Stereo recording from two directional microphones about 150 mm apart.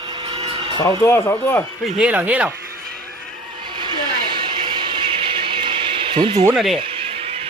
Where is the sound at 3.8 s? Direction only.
30° right (ahead or behind).